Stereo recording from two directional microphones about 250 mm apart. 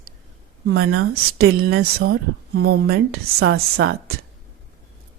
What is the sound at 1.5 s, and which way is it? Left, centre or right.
Speech, right.